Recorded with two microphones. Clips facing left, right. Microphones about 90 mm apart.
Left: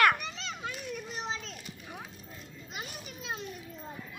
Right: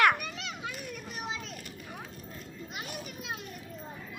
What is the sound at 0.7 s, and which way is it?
Children playing, 5° right (ahead or behind).